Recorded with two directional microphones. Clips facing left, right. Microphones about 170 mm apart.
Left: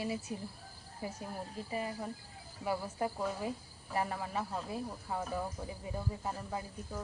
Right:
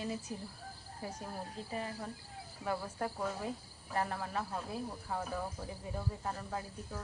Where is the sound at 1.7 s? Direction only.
10° left (ahead or behind).